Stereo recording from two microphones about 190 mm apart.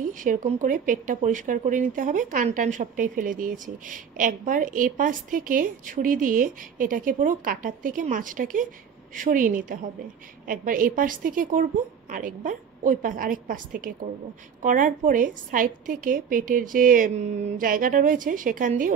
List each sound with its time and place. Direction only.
0.0 s speech: 45° right (ahead or behind)